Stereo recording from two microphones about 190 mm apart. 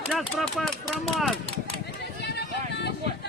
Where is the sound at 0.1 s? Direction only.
Centre (ahead or behind).